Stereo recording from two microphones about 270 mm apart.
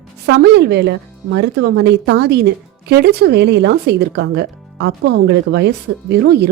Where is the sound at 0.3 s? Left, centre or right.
Right.